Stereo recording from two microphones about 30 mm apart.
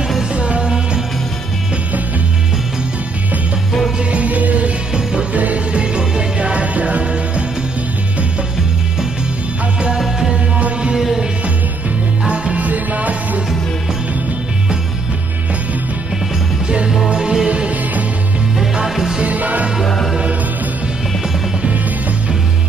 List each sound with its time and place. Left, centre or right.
0.3 s music: right
4.1 s music: right
5.7 s music: right
12.5 s music: right
17.1 s music: right
17.5 s music: right
18.9 s music: centre
19.2 s music: right
19.8 s music: centre